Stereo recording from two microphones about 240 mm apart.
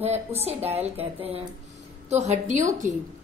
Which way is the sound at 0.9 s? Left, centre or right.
Right.